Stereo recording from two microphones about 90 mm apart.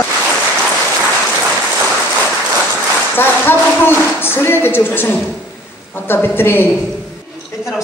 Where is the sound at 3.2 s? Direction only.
25° left (ahead or behind).